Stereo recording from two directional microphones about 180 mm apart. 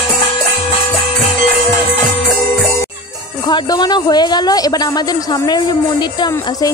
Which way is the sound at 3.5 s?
25° left (ahead or behind).